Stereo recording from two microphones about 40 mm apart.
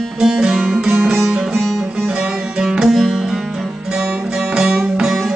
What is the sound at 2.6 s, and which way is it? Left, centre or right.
Music, centre.